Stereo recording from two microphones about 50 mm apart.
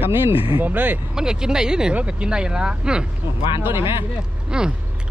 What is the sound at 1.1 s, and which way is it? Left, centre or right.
Speech, centre.